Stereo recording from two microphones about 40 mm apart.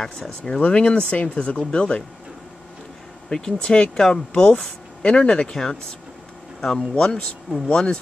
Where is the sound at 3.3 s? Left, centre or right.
Centre.